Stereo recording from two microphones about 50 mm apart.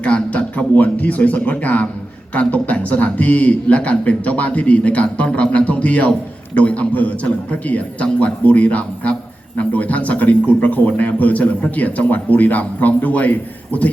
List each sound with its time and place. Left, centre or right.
0.0 s a man's voice: left